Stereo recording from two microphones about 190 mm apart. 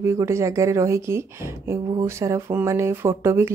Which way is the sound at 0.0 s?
15° right (ahead or behind).